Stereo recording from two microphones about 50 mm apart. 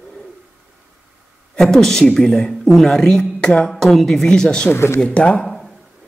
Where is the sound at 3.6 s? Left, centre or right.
Centre.